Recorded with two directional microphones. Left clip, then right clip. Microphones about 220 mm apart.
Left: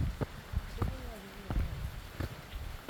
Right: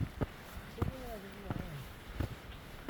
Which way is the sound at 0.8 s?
5° right (ahead or behind).